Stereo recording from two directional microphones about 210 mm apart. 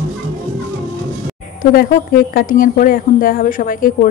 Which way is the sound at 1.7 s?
45° left (ahead or behind).